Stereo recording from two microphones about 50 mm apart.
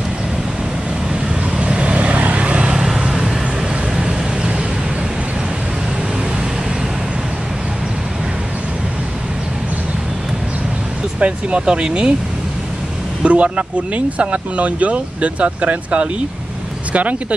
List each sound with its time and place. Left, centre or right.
1.6 s vehicle: centre
11.1 s speech: right
13.2 s speech: right